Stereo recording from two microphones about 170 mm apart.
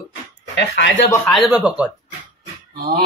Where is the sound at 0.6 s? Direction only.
90° left.